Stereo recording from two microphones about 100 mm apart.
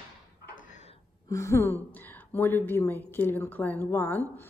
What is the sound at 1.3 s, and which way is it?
A woman's voice, 30° left (ahead or behind).